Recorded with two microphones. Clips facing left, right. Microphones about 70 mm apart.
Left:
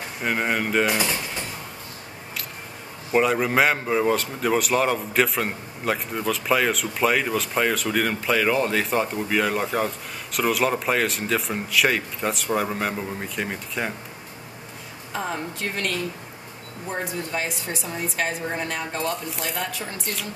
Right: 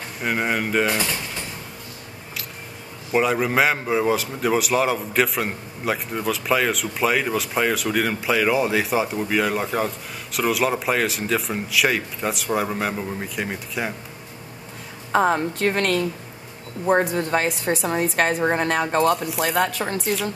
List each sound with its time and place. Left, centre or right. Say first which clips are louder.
0.2 s a man's voice: right 1 dB; centre
3.1 s a man's voice: even; centre
15.1 s a woman's voice: right 10 dB; right
20.0 s a man's voice: right 7 dB; centre